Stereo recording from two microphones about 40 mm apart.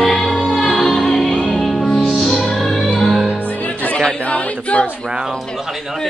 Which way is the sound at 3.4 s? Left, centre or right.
Left.